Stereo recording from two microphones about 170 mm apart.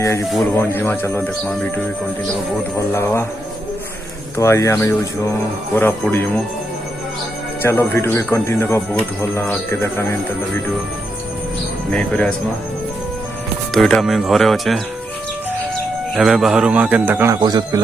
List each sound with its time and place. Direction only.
0.5 s speech: 15° left (ahead or behind)
4.4 s speech: 15° left (ahead or behind)
7.6 s speech: 15° left (ahead or behind)
11.9 s speech: 5° left (ahead or behind)
13.7 s a man's voice: centre (ahead or behind)
16.1 s a man's voice: 5° right (ahead or behind)
17.4 s speech: 25° right (ahead or behind)